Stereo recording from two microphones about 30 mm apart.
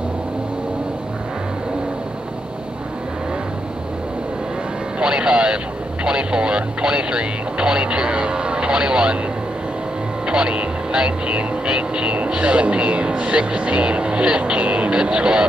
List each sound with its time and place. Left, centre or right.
4.9 s music: right
6.0 s speech: right
10.2 s speech: right